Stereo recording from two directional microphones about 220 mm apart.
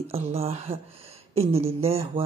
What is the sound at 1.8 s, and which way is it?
Speech, 25° right (ahead or behind).